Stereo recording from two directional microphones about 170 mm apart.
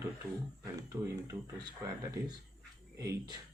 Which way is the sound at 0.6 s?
20° right (ahead or behind).